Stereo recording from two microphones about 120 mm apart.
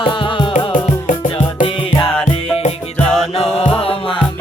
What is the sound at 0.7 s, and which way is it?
Music, 90° left.